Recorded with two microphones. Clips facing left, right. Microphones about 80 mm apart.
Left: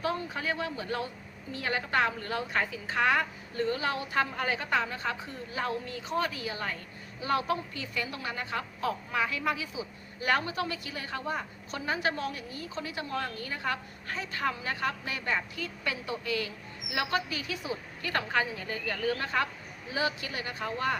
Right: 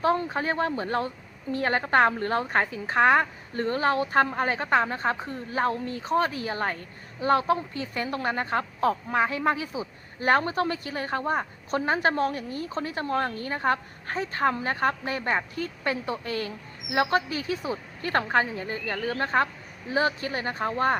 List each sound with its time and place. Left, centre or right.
0.0 s a woman's voice: right